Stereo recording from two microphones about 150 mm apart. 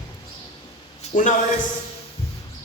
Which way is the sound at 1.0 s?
55° left (ahead or behind).